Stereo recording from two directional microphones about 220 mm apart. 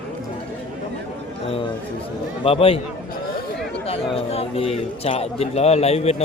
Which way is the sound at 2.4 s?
25° left (ahead or behind).